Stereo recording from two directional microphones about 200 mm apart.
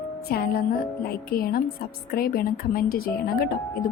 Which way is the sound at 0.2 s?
50° left (ahead or behind).